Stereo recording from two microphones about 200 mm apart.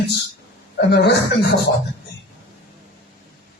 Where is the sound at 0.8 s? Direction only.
55° left (ahead or behind).